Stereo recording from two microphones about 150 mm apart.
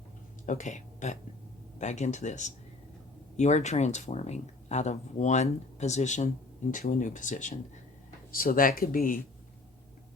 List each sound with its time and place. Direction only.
0.4 s speech: 55° left (ahead or behind)
8.3 s speech: 75° left (ahead or behind)